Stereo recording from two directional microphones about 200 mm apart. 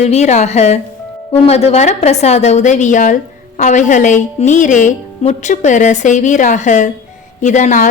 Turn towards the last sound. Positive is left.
turn(degrees=40)  # may be behind; listen again after turning